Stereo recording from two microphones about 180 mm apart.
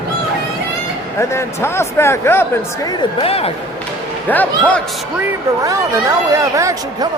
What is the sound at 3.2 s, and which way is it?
Speech, 35° left (ahead or behind).